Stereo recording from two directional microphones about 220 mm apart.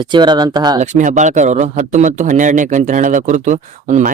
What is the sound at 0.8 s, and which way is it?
Speech, 35° right (ahead or behind).